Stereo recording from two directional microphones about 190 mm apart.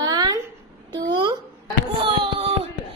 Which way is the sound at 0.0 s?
20° right (ahead or behind).